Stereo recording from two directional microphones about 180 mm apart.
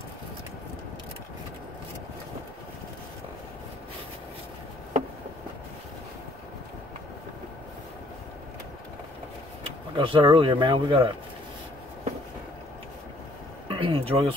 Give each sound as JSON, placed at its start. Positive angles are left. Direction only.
{"t": 9.9, "sound": "speech", "side_deg": -30}
{"t": 13.7, "sound": "speech", "side_deg": -30}